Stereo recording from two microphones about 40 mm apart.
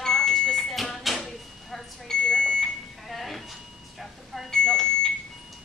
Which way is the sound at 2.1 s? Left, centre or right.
Centre.